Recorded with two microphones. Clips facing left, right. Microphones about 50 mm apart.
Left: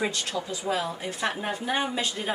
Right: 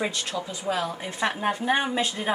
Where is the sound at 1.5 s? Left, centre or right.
Right.